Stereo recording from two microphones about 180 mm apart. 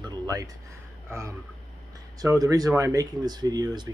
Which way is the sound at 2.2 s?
20° right (ahead or behind).